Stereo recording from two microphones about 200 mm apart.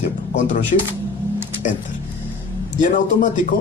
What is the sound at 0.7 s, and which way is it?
Speech, 45° left (ahead or behind).